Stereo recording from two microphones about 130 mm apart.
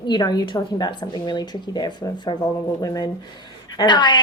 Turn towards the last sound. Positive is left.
turn(degrees=35)  # may be behind; listen again after turning